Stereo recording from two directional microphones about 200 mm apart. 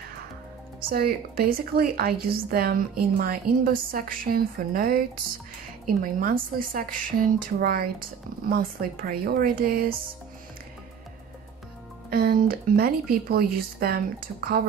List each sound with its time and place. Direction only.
0.8 s a woman's voice: 45° right (ahead or behind)
12.1 s a woman's voice: 50° right (ahead or behind)